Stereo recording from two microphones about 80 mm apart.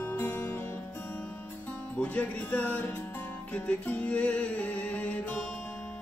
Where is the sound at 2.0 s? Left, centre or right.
Centre.